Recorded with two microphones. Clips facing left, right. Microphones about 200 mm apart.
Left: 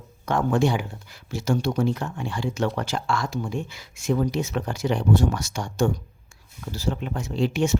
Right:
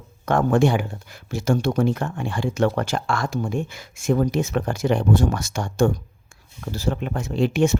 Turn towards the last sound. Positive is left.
turn(degrees=-55)  # may be behind; listen again after turning